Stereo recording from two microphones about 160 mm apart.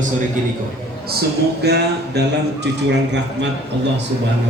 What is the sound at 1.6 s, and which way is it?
Speech, 90° right.